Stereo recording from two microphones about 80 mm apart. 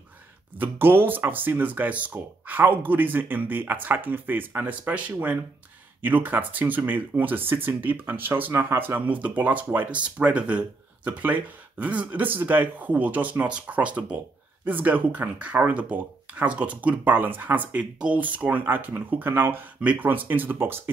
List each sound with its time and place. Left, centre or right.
0.6 s speech: right